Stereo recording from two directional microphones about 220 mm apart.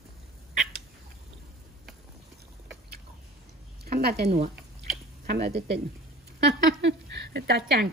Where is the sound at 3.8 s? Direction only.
45° right (ahead or behind).